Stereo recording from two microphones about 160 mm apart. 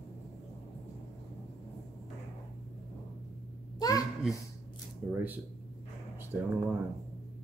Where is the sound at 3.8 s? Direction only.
25° left (ahead or behind).